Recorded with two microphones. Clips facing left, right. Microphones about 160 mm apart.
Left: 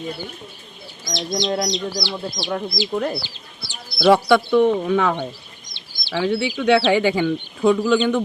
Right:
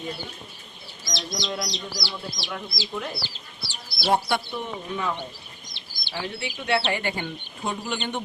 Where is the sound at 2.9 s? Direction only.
50° left (ahead or behind).